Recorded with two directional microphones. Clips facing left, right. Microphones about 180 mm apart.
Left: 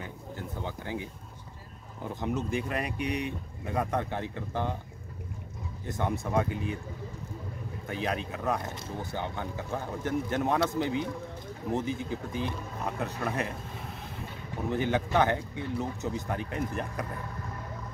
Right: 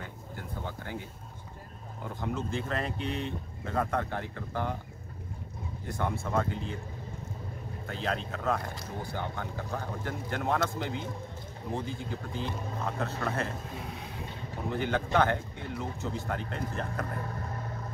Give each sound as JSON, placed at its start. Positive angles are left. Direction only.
{"t": 0.7, "sound": "speech", "side_deg": 15}
{"t": 2.1, "sound": "speech", "side_deg": 20}
{"t": 5.9, "sound": "speech", "side_deg": 20}
{"t": 7.9, "sound": "speech", "side_deg": 15}
{"t": 13.7, "sound": "vehicle", "side_deg": 0}
{"t": 14.7, "sound": "speech", "side_deg": 15}